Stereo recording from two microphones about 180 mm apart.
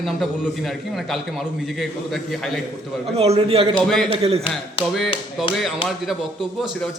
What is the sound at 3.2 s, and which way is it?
Speech, 35° right (ahead or behind).